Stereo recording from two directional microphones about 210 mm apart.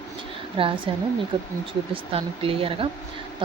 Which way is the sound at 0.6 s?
25° right (ahead or behind).